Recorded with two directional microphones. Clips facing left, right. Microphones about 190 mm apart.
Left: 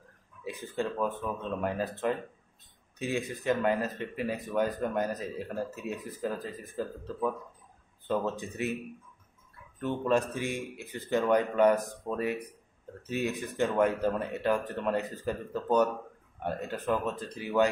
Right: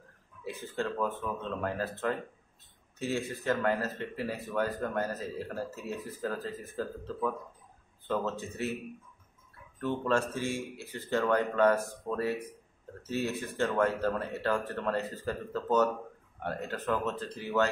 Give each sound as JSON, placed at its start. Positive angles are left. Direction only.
{"t": 0.4, "sound": "speech", "side_deg": 15}
{"t": 9.8, "sound": "speech", "side_deg": 15}